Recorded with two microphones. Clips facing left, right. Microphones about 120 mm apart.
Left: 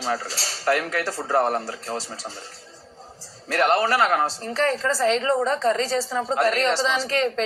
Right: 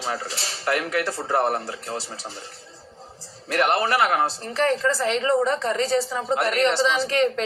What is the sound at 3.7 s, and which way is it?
A woman's voice, 40° left (ahead or behind).